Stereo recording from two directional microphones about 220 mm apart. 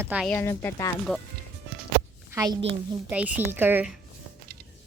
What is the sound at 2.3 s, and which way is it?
Speech, 15° right (ahead or behind).